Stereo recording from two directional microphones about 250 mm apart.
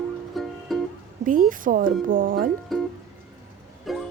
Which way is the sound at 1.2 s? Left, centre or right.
Right.